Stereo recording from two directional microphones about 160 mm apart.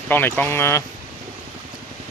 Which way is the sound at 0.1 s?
10° left (ahead or behind).